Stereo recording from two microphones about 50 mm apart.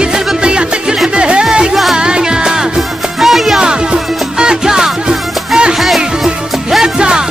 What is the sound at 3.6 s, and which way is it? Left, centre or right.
Music, centre.